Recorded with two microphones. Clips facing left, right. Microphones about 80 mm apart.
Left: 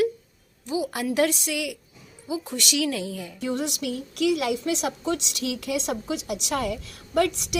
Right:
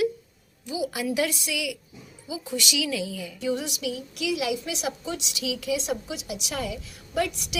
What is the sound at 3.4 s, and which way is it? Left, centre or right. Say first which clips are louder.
A woman's voice: even; left.